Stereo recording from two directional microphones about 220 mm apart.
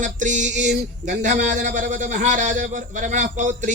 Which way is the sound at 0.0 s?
35° right (ahead or behind).